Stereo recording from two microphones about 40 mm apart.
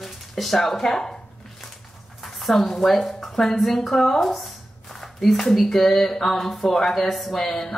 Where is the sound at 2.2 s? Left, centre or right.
Centre.